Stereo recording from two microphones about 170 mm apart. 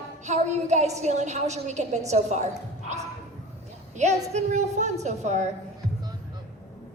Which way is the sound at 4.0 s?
40° right (ahead or behind).